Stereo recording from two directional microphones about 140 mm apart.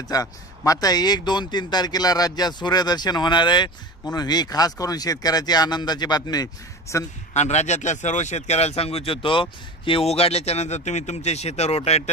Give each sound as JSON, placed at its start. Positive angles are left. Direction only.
{"t": 0.1, "sound": "speech", "side_deg": 25}
{"t": 7.3, "sound": "speech", "side_deg": 55}